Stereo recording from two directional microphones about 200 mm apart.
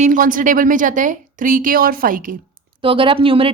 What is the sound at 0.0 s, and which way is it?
Speech, 40° right (ahead or behind).